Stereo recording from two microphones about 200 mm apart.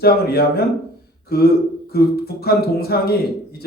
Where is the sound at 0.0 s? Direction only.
50° left (ahead or behind).